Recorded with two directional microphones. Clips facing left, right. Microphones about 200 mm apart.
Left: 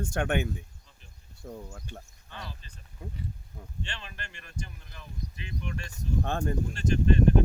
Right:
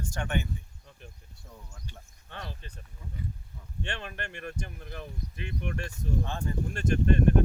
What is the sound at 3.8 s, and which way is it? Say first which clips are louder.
Speech: right 6 dB; 55° right (ahead or behind).